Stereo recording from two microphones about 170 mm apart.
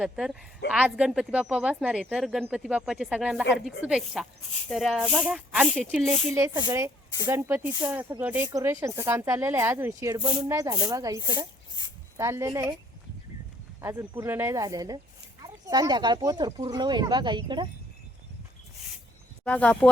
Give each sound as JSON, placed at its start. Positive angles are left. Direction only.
{"t": 0.0, "sound": "speech", "side_deg": -5}
{"t": 6.3, "sound": "speech", "side_deg": -20}
{"t": 13.8, "sound": "speech", "side_deg": -15}
{"t": 19.5, "sound": "speech", "side_deg": 5}